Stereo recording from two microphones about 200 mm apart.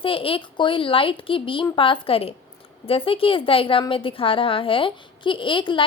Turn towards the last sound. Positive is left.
turn(degrees=25)  # may be behind; listen again after turning